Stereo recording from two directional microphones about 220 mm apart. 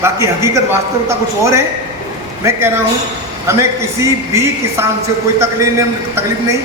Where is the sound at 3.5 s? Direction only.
15° right (ahead or behind).